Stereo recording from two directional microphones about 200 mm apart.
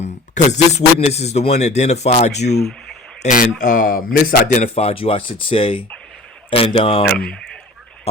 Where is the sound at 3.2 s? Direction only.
40° left (ahead or behind).